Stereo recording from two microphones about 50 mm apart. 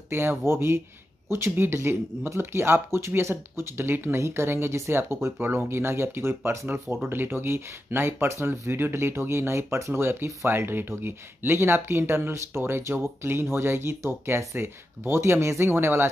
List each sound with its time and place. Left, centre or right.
0.1 s speech: right
4.2 s speech: right